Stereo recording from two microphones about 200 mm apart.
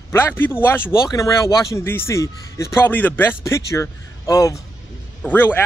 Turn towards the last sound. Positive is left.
turn(degrees=10)  # may be behind; listen again after turning